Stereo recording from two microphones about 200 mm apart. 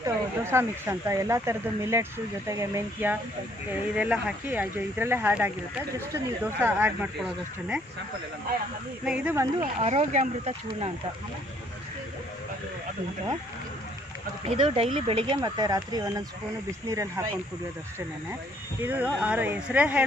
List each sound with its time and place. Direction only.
0.0 s speech: 10° right (ahead or behind)
9.0 s speech: 10° right (ahead or behind)
9.8 s speech: 35° right (ahead or behind)
14.4 s speech: 25° right (ahead or behind)
18.8 s speech: 10° right (ahead or behind)